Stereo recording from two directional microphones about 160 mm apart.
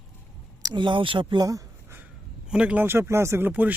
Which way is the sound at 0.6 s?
30° right (ahead or behind).